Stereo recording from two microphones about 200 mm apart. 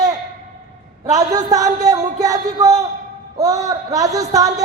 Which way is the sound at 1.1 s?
20° right (ahead or behind).